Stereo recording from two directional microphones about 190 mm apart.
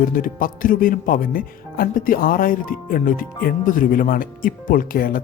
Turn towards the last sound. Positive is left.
turn(degrees=50)  # may be behind; listen again after turning